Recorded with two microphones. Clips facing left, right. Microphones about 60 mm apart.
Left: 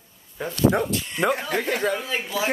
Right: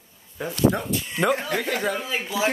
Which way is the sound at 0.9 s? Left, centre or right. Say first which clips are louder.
Even; centre.